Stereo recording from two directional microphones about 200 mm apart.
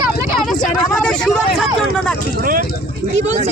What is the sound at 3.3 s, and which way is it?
Speech, 35° right (ahead or behind).